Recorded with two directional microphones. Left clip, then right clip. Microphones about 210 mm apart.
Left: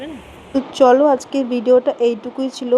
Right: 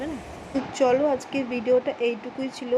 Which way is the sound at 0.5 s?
25° left (ahead or behind).